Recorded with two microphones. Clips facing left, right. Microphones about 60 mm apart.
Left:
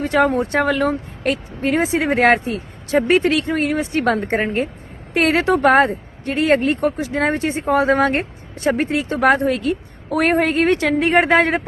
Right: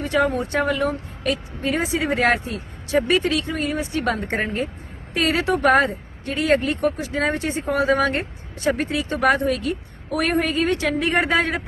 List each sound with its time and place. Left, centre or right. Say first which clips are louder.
0.0 s speech: left 4 dB; left
0.6 s a woman's voice: left 4 dB; left
5.5 s speech: left 2 dB; left
6.7 s speech: left 3 dB; left